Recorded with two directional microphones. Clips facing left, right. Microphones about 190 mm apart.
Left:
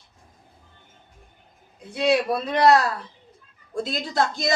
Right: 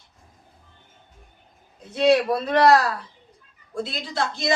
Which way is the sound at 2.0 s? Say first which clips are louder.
Right 3 dB; 15° left (ahead or behind).